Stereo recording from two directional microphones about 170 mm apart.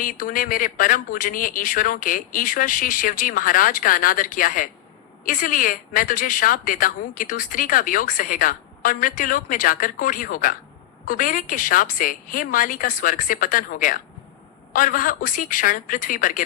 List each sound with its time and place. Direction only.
0.0 s speech: 55° left (ahead or behind)